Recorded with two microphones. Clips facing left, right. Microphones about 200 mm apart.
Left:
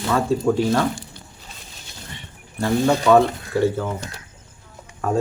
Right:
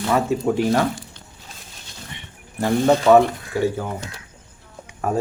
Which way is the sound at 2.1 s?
20° right (ahead or behind).